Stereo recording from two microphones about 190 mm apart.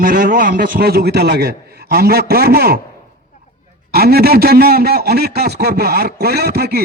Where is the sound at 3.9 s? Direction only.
55° right (ahead or behind).